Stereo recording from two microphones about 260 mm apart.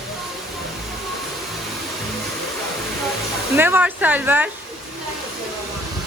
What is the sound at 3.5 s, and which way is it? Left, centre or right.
Speech, centre.